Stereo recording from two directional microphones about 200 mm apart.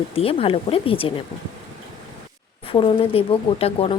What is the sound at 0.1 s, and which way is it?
Speech, 30° left (ahead or behind).